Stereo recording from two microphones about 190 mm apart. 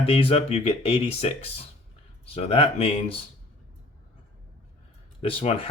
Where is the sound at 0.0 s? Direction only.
30° left (ahead or behind).